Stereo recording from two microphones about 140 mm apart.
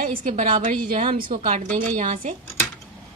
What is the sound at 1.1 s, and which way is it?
A woman's voice, 70° right (ahead or behind).